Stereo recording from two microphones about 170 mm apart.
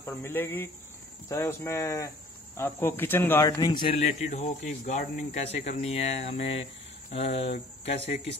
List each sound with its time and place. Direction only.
0.0 s speech: 15° left (ahead or behind); by 8.2 s 40° left (ahead or behind)